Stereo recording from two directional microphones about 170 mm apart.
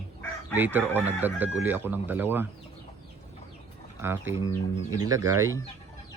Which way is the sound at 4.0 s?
15° right (ahead or behind).